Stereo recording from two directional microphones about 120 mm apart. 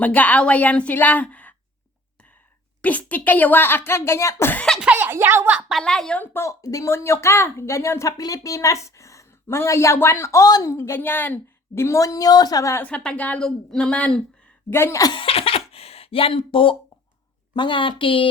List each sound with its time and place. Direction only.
0.0 s speech: 15° left (ahead or behind)
2.8 s speech: 10° left (ahead or behind)
4.8 s a woman's voice: 15° right (ahead or behind)
5.8 s speech: 5° left (ahead or behind); by 12.8 s 30° left (ahead or behind)
12.8 s speech: 10° left (ahead or behind)
14.7 s speech: 20° left (ahead or behind)
15.1 s a sound: 50° left (ahead or behind)
17.5 s a woman's voice: 45° left (ahead or behind)